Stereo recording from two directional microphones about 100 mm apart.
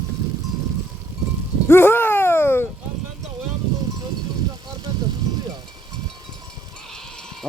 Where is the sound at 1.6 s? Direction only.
25° left (ahead or behind).